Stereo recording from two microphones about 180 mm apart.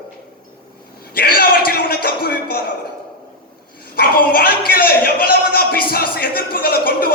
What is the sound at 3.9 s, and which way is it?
A man's voice, 55° left (ahead or behind).